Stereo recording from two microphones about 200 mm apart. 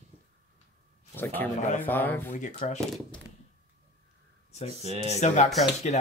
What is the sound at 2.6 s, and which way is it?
Speech, 25° left (ahead or behind).